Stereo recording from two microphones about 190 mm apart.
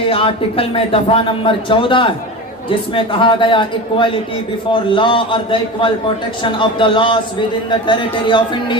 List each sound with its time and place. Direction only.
0.1 s a man's voice: 30° left (ahead or behind)